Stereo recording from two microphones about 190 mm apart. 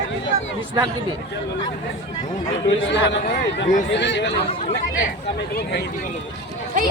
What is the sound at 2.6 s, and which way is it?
Speech, 70° left (ahead or behind).